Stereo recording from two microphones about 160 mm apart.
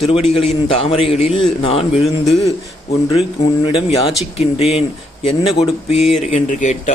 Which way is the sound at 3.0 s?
35° left (ahead or behind).